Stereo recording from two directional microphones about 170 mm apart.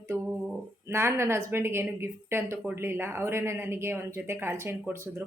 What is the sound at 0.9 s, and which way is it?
A woman's voice, 15° right (ahead or behind).